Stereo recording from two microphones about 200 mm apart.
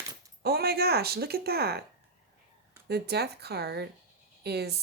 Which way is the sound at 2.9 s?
55° right (ahead or behind).